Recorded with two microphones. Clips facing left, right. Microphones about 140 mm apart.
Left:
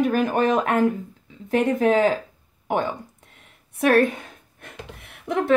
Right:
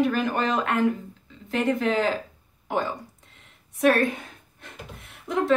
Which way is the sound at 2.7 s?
60° left (ahead or behind).